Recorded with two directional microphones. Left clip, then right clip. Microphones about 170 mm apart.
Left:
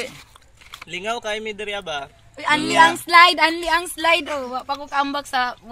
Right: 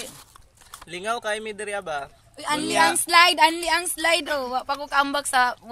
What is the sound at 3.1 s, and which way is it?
Speech, 25° left (ahead or behind).